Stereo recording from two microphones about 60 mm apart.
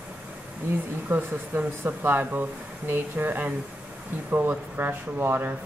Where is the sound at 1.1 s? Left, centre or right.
Right.